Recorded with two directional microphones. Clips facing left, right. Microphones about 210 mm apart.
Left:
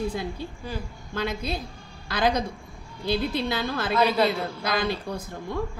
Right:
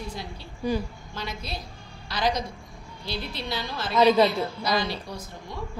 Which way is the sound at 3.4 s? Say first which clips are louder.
Left 5 dB; 55° left (ahead or behind).